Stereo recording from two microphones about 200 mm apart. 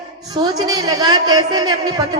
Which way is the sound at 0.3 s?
20° right (ahead or behind).